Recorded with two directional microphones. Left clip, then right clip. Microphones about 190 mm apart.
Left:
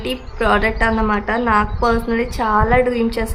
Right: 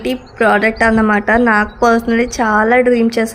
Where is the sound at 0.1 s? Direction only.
20° right (ahead or behind).